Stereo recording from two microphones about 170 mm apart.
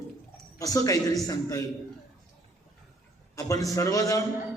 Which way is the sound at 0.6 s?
20° left (ahead or behind).